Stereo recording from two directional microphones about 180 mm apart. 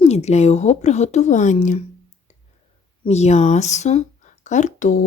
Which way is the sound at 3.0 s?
35° left (ahead or behind).